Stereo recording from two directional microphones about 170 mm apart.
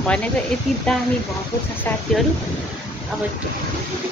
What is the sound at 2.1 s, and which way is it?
Speech, 5° left (ahead or behind).